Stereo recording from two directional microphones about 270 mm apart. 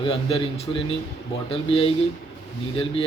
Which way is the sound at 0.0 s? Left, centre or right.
Centre.